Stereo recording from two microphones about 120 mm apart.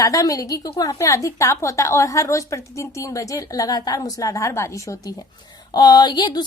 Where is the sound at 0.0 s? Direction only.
25° left (ahead or behind).